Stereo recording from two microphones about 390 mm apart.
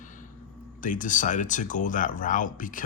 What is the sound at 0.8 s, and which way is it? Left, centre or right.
Speech, centre.